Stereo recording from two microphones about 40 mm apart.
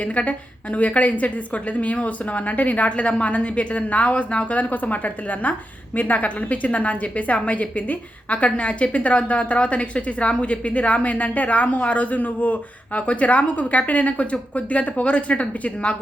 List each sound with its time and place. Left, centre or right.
0.0 s speech: left